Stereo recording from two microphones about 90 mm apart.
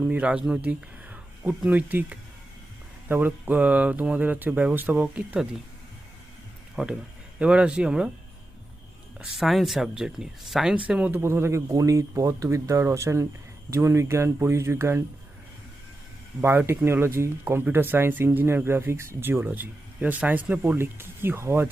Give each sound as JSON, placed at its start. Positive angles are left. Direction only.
{"t": 0.1, "sound": "speech", "side_deg": -10}
{"t": 6.8, "sound": "speech", "side_deg": -10}
{"t": 9.1, "sound": "speech", "side_deg": -5}
{"t": 11.2, "sound": "speech", "side_deg": -30}
{"t": 16.4, "sound": "speech", "side_deg": -25}